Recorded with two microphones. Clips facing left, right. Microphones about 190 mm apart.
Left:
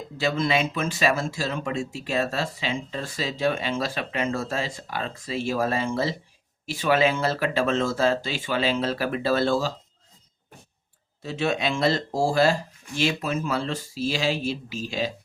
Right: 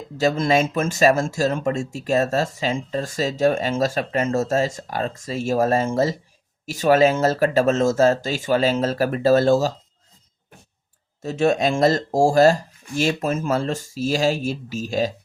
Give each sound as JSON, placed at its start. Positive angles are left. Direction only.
{"t": 0.2, "sound": "speech", "side_deg": -45}
{"t": 11.2, "sound": "speech", "side_deg": -45}